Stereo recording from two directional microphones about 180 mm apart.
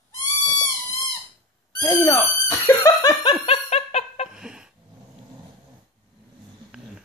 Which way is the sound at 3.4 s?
35° left (ahead or behind).